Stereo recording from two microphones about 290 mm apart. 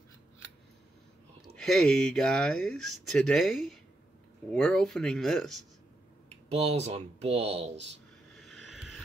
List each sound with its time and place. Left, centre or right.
1.5 s speech: centre
6.5 s speech: right
8.4 s vehicle: centre